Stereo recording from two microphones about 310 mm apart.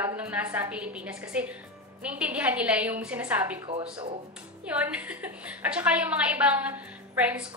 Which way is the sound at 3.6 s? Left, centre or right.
Centre.